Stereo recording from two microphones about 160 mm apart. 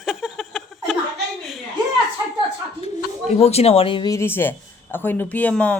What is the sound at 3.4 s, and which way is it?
Speech, 40° left (ahead or behind).